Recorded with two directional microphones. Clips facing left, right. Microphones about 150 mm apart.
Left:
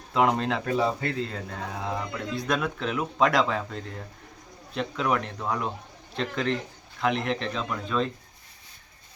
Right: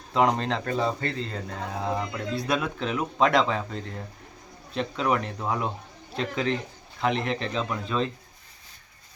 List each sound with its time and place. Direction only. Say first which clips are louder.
0.1 s a man's voice: even; centre (ahead or behind)